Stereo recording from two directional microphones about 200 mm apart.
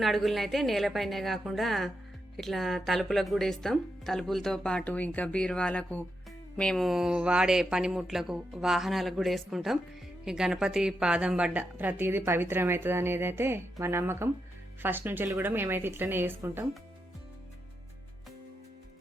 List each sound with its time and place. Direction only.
0.0 s a woman's voice: centre (ahead or behind)